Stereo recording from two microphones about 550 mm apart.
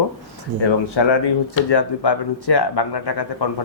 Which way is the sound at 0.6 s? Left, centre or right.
Left.